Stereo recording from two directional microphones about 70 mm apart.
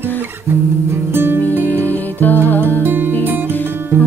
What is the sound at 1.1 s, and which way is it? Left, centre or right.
Music, right.